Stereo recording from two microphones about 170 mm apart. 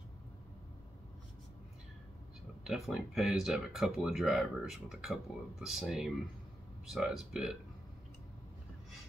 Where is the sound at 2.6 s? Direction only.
Centre (ahead or behind).